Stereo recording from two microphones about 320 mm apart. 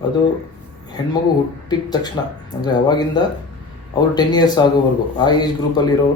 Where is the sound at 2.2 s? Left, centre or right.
Centre.